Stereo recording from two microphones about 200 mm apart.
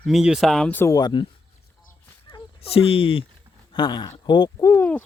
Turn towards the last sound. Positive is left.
turn(degrees=10)  # may be behind; listen again after turning